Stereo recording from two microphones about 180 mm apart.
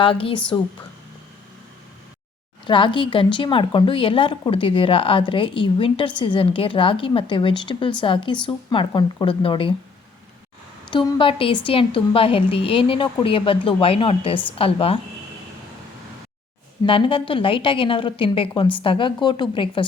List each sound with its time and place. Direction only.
0.0 s a woman's voice: 30° left (ahead or behind)
2.6 s a woman's voice: 25° left (ahead or behind)
10.9 s a woman's voice: 30° left (ahead or behind)
16.8 s a woman's voice: 30° left (ahead or behind)